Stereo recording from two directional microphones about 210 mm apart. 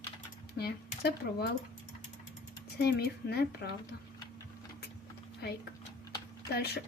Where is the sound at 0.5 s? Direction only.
50° left (ahead or behind).